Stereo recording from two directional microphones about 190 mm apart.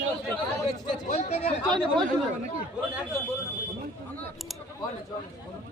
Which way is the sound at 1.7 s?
25° right (ahead or behind).